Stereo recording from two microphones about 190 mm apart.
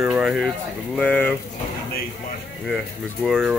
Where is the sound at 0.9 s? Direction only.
5° left (ahead or behind).